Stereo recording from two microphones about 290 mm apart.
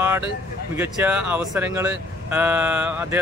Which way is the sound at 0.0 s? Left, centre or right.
Centre.